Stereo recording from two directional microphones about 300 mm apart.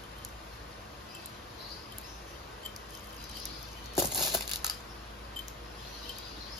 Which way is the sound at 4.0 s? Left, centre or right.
Centre.